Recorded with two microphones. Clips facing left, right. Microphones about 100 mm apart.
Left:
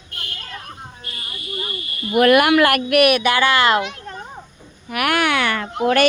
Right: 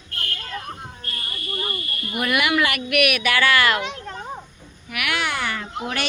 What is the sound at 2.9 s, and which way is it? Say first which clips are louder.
Speech: left 4 dB; 30° left (ahead or behind).